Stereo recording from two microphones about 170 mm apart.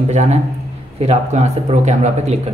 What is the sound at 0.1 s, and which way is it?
A man's voice, 45° right (ahead or behind).